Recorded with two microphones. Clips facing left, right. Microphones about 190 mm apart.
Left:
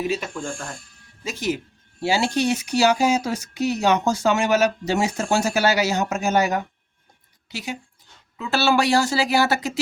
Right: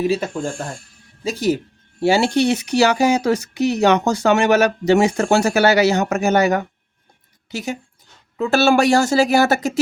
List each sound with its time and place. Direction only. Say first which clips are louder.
1.2 s speech: right 6 dB; 35° right (ahead or behind)
2.0 s speech: right 6 dB; 55° right (ahead or behind)
7.5 s speech: right 5 dB; 45° right (ahead or behind)